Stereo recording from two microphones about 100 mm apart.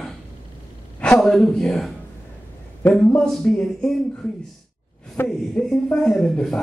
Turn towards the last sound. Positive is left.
turn(degrees=5)  # may be behind; listen again after turning